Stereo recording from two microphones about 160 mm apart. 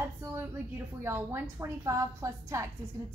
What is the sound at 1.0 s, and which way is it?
A woman's voice, 15° right (ahead or behind).